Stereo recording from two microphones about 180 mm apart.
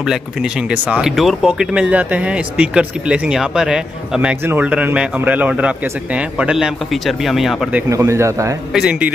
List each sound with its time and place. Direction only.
0.0 s speech: 5° right (ahead or behind)
7.9 s a man's voice: 15° right (ahead or behind)
8.7 s speech: 5° right (ahead or behind)